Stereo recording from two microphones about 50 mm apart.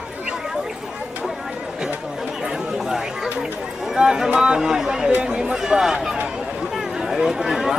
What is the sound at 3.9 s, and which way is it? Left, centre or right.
Speech, centre.